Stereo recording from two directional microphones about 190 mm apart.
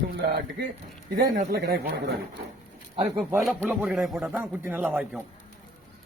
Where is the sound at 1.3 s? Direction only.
50° right (ahead or behind).